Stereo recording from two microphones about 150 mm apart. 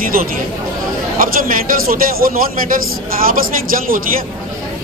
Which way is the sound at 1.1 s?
70° right (ahead or behind).